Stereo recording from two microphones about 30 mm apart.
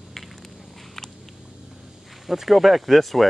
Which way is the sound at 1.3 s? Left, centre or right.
Right.